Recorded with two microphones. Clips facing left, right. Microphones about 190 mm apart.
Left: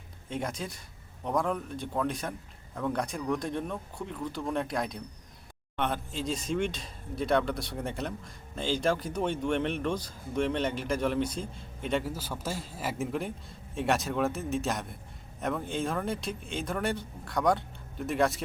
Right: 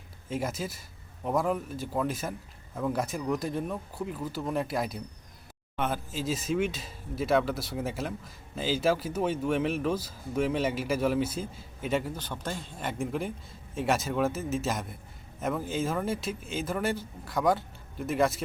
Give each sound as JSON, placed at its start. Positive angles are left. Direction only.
{"t": 0.3, "sound": "speech", "side_deg": -5}